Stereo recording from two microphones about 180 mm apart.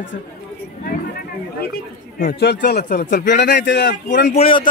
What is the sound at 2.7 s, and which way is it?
Speech, 55° left (ahead or behind).